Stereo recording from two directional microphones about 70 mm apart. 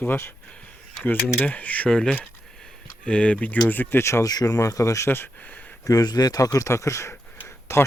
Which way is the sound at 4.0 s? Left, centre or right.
Left.